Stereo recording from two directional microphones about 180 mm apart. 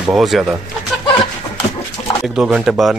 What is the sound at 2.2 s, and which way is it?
Speech, 5° right (ahead or behind).